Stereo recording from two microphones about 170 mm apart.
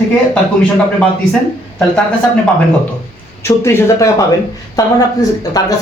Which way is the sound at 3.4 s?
15° left (ahead or behind).